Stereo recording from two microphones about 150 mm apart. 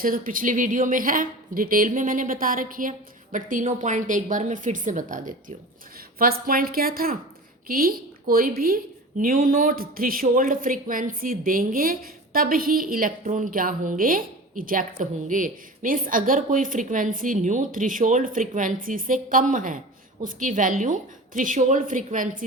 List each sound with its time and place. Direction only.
0.0 s a woman's voice: 65° right (ahead or behind)
6.1 s a woman's voice: 80° right; by 22.4 s 65° right (ahead or behind)